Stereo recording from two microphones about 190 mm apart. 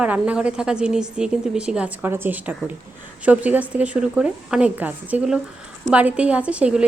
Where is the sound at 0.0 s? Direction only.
5° right (ahead or behind).